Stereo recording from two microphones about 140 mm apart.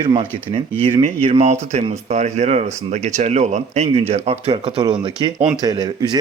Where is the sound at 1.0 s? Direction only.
45° right (ahead or behind).